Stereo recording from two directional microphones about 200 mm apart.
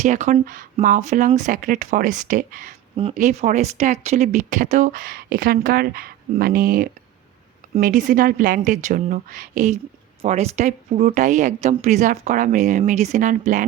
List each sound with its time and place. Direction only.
0.0 s speech: 35° right (ahead or behind)
2.9 s speech: 30° right (ahead or behind)